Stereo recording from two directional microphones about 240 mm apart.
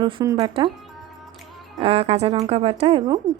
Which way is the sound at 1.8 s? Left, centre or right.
Right.